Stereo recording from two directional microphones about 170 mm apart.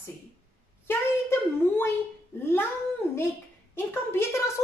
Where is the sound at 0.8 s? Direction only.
15° left (ahead or behind).